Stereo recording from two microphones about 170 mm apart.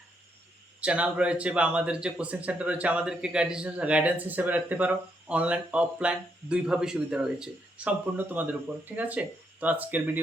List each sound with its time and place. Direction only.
0.8 s speech: 5° right (ahead or behind)